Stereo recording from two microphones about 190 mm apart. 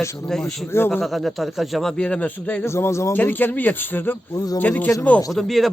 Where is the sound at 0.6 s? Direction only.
10° left (ahead or behind).